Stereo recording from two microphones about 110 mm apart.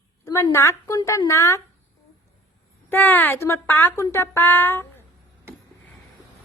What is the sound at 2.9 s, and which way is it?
Speech, 15° left (ahead or behind).